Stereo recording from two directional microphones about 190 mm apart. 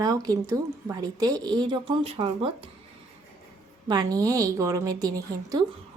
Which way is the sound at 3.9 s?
20° right (ahead or behind).